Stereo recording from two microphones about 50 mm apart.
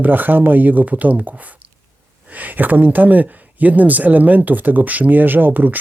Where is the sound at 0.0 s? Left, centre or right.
Right.